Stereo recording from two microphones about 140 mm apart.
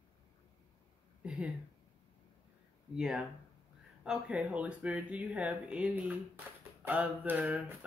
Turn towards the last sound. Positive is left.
turn(degrees=-10)  # may be behind; listen again after turning